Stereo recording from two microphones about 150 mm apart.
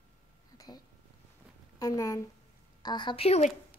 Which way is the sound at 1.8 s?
20° left (ahead or behind).